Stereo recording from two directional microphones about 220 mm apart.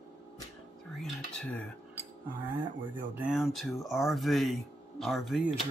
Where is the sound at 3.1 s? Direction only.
5° right (ahead or behind).